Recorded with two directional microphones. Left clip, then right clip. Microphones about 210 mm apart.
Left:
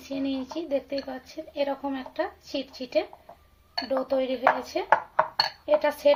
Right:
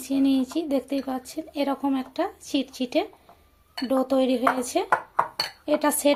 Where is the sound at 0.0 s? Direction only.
40° right (ahead or behind).